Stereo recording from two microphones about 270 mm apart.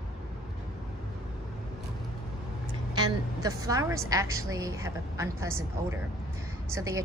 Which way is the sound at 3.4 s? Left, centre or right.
Centre.